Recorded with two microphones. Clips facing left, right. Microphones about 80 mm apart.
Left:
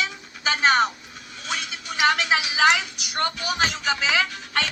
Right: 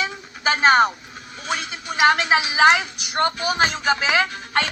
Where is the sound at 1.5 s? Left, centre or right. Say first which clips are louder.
Right 4 dB; right.